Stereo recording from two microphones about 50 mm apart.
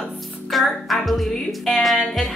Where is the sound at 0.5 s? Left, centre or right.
Centre.